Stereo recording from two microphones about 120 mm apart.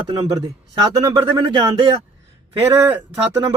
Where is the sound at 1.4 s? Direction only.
40° right (ahead or behind).